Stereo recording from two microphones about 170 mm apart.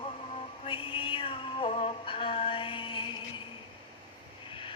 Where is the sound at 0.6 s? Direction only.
30° left (ahead or behind).